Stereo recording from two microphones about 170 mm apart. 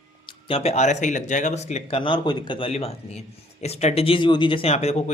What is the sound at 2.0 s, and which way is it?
Speech, 30° left (ahead or behind).